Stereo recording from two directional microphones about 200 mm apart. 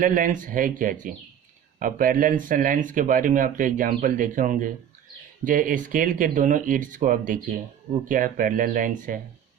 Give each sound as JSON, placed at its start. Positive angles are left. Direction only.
{"t": 0.0, "sound": "speech", "side_deg": -40}